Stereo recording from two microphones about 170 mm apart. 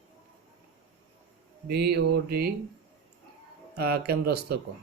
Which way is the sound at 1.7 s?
70° right (ahead or behind).